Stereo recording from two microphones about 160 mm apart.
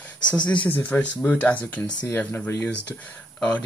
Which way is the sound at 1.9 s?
25° left (ahead or behind).